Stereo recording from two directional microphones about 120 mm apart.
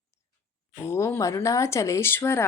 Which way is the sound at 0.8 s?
25° left (ahead or behind).